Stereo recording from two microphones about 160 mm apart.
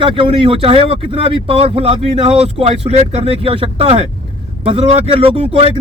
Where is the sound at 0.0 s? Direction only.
35° right (ahead or behind).